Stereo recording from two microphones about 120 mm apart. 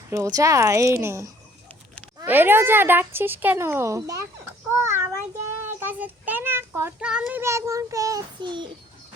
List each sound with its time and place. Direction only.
0.1 s a woman's voice: 30° right (ahead or behind)
4.8 s child singing: 20° right (ahead or behind)
5.8 s a child's voice: 15° right (ahead or behind)
7.0 s speech: 5° right (ahead or behind)
7.4 s a woman's voice: 25° right (ahead or behind)
8.4 s a child's voice: 40° right (ahead or behind)